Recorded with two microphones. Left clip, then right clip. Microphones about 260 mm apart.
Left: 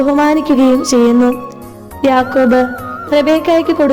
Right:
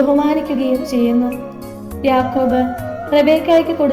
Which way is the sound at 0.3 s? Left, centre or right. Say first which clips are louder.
Left 6 dB; left.